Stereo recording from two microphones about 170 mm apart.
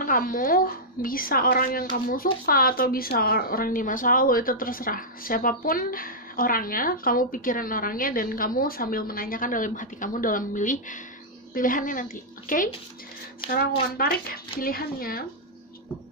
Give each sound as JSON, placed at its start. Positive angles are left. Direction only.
{"t": 0.0, "sound": "a woman's voice", "side_deg": 55}